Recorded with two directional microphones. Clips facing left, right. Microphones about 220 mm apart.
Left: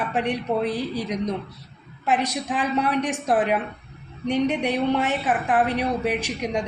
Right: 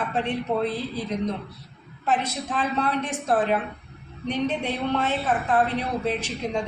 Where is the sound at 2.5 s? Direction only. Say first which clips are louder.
Left 2 dB; 15° left (ahead or behind).